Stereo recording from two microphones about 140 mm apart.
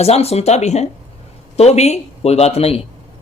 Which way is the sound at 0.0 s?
45° left (ahead or behind).